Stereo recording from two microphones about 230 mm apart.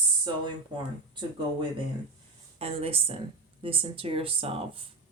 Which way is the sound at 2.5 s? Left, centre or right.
Right.